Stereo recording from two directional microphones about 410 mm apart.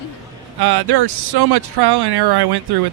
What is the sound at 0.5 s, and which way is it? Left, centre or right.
A man's voice, right.